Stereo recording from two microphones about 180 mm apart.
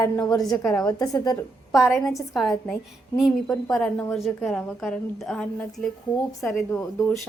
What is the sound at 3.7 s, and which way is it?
A woman's voice, 10° left (ahead or behind).